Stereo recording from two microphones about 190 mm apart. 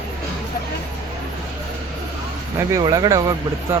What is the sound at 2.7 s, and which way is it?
Speech, 20° right (ahead or behind).